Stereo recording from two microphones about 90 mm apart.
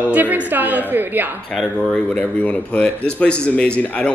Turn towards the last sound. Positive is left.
turn(degrees=15)  # may be behind; listen again after turning